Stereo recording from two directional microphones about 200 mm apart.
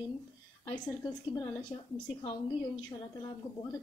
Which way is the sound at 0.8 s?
20° left (ahead or behind).